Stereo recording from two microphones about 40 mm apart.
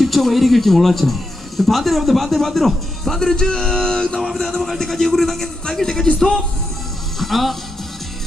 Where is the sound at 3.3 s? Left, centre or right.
Centre.